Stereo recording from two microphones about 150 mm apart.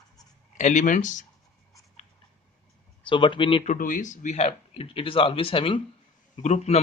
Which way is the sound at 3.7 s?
60° left (ahead or behind).